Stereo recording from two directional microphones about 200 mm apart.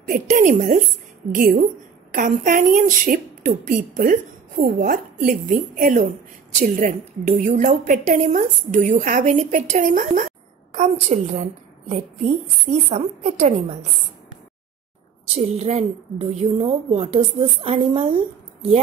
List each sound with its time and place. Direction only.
0.1 s a woman's voice: 40° right (ahead or behind)
12.7 s a woman's voice: 35° right (ahead or behind)
15.3 s a woman's voice: 30° right (ahead or behind)